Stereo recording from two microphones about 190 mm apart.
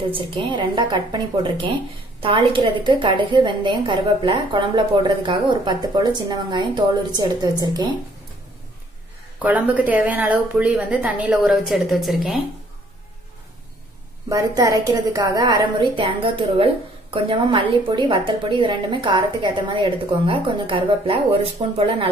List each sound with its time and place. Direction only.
0.1 s a woman's voice: 25° right (ahead or behind)
9.4 s a woman's voice: 10° right (ahead or behind)
14.3 s a woman's voice: 20° right (ahead or behind)